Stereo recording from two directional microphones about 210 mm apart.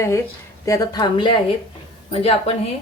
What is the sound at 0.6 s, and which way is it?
Speech, 15° left (ahead or behind).